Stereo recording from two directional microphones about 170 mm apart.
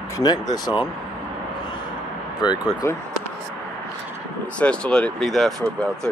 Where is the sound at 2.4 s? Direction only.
25° left (ahead or behind).